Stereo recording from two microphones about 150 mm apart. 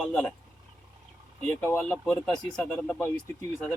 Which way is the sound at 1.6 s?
10° left (ahead or behind).